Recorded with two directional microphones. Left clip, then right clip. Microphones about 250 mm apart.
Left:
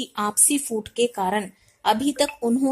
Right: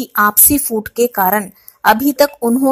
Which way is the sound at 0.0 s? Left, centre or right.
Centre.